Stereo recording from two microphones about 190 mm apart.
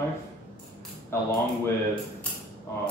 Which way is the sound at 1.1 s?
10° left (ahead or behind).